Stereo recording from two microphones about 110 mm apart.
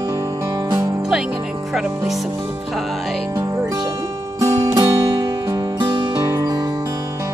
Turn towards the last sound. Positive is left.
turn(degrees=-25)  # may be behind; listen again after turning